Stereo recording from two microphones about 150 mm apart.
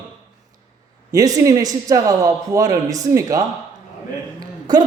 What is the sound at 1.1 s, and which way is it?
A man's voice, 25° right (ahead or behind).